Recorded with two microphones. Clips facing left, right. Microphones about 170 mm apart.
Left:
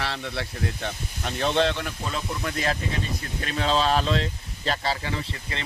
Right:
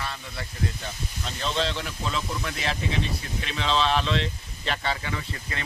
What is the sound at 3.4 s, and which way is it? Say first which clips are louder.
Speech: left 2 dB; 45° left (ahead or behind).